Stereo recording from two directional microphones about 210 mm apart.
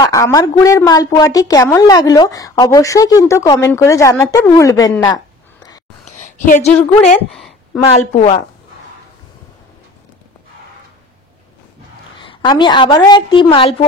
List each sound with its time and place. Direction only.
0.0 s a woman's voice: 15° left (ahead or behind)
5.0 s a sound: 20° left (ahead or behind)
6.0 s a sound: 35° left (ahead or behind)
6.7 s a woman's voice: 5° left (ahead or behind)
7.8 s a woman's voice: 30° left (ahead or behind)
12.2 s a woman's voice: 20° left (ahead or behind)